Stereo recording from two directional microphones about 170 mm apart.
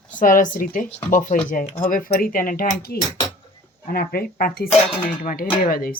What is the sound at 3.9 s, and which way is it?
Speech, 60° left (ahead or behind).